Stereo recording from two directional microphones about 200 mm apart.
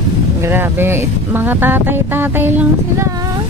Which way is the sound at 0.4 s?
10° right (ahead or behind).